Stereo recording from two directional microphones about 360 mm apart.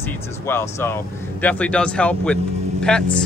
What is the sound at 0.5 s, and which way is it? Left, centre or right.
Speech, centre.